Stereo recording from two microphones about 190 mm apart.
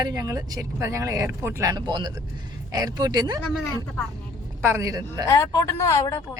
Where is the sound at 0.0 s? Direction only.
20° right (ahead or behind).